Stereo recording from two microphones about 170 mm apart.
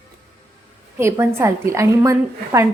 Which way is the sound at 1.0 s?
15° right (ahead or behind).